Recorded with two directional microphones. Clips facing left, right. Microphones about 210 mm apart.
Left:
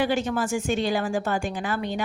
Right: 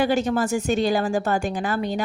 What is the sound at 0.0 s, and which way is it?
A woman's voice, 40° right (ahead or behind).